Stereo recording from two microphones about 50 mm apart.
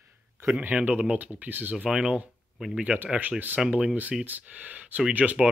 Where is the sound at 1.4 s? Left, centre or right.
Right.